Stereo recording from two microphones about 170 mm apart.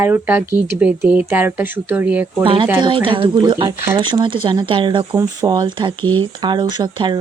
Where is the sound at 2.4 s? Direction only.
30° right (ahead or behind).